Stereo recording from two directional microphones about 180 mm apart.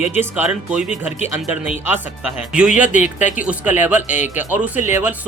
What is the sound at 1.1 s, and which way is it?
Speech, 40° left (ahead or behind).